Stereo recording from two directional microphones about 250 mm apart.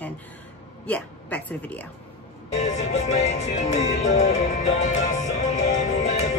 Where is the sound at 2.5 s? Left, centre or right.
Left.